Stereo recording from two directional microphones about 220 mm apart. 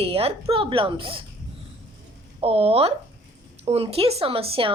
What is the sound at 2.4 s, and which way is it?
A woman's voice, 25° right (ahead or behind).